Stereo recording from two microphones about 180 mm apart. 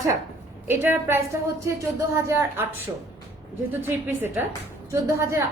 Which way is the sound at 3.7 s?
10° right (ahead or behind).